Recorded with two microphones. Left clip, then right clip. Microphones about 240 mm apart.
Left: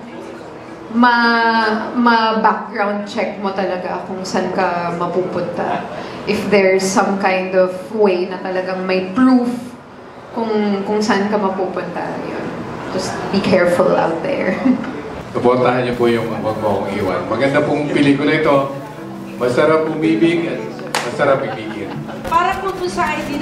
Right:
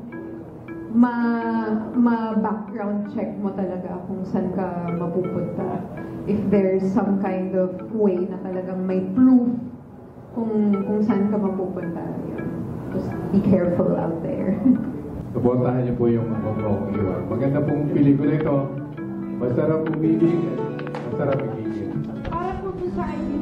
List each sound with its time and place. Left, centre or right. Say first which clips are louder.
0.9 s a woman's voice: left 10 dB; centre
6.9 s a woman's voice: left 8 dB; centre
7.2 s a woman's voice: left 9 dB; centre
10.4 s a woman's voice: left 6 dB; centre
13.3 s a woman's voice: left 7 dB; centre
22.4 s a woman's voice: left 7 dB; centre